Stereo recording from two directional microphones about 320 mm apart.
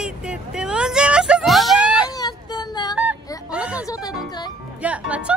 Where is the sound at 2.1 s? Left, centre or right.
Centre.